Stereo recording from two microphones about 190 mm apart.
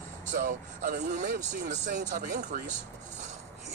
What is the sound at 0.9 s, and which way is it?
Speech, 60° right (ahead or behind).